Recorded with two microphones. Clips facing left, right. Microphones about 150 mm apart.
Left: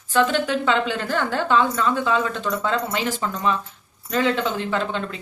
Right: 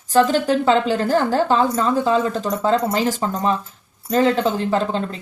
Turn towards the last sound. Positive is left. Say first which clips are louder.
# right 4 dB
turn(degrees=-35)  # may be behind; listen again after turning